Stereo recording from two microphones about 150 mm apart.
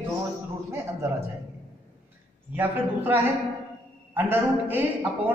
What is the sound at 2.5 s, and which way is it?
A man's voice, 10° right (ahead or behind).